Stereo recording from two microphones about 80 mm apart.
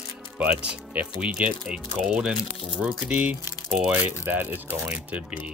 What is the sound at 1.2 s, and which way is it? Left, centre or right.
Speech, centre.